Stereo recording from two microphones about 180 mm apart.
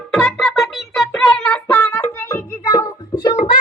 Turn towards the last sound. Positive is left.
turn(degrees=25)  # may be behind; listen again after turning